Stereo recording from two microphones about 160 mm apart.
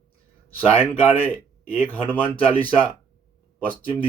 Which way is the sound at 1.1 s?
10° left (ahead or behind).